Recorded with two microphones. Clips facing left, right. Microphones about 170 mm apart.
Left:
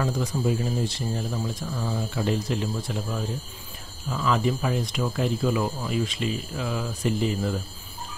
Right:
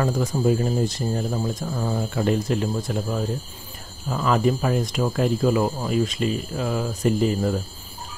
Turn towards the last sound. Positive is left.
turn(degrees=-45)  # may be behind; listen again after turning